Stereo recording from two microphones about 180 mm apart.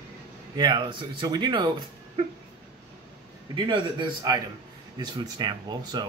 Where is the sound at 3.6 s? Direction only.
25° right (ahead or behind).